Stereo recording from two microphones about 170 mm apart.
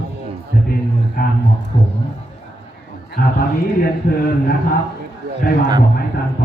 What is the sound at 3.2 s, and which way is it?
Speech, 55° left (ahead or behind).